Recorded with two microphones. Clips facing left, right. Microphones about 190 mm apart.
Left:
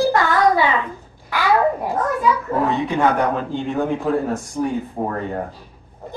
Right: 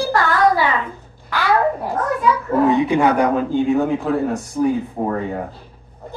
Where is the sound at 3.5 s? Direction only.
5° right (ahead or behind).